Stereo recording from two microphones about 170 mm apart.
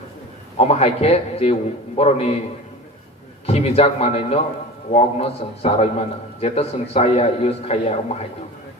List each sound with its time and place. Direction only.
0.6 s a man's voice: 40° left (ahead or behind)
3.4 s a man's voice: 35° left (ahead or behind)